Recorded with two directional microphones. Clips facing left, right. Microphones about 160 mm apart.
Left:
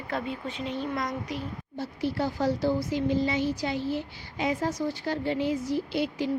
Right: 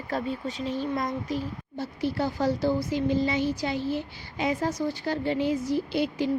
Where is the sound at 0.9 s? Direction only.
25° right (ahead or behind).